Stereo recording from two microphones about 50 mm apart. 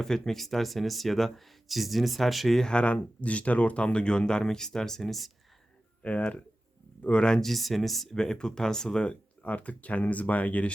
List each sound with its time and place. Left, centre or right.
0.0 s speech: centre
2.6 s speech: centre
6.0 s speech: left
7.4 s speech: centre
8.1 s speech: centre; by 10.7 s left